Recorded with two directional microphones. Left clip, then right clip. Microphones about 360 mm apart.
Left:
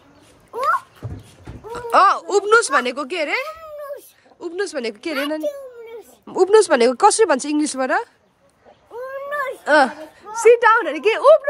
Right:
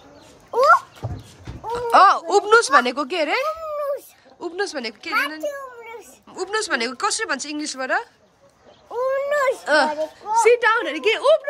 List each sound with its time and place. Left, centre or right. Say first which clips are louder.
1.7 s speech: right 1 dB; centre
6.2 s speech: left 12 dB; centre
8.9 s cat: right 5 dB; right
9.7 s speech: left 3 dB; centre